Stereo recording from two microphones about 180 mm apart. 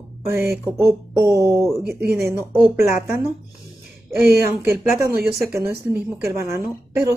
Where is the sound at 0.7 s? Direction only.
15° right (ahead or behind).